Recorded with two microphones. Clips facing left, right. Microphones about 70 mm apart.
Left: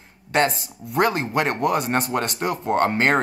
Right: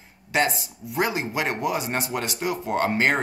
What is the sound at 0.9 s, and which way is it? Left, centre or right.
Speech, left.